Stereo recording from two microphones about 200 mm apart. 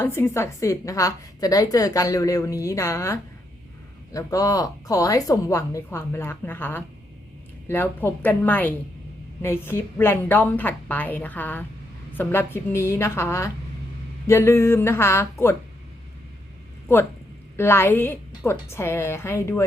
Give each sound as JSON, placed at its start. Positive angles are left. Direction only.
{"t": 0.0, "sound": "a woman's voice", "side_deg": 10}
{"t": 17.6, "sound": "a woman's voice", "side_deg": 10}